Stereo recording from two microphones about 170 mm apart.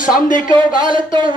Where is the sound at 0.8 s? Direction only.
30° right (ahead or behind).